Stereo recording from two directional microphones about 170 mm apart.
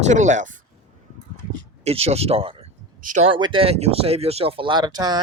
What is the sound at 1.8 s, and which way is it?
Speech, 35° right (ahead or behind).